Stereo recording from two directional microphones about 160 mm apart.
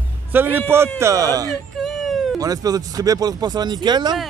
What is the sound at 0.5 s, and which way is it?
Speech, 15° right (ahead or behind).